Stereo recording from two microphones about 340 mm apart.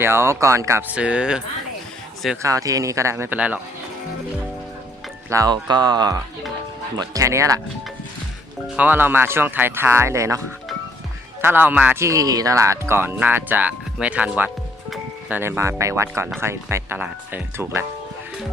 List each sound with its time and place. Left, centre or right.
0.0 s speech: centre
5.3 s speech: centre
8.6 s speech: centre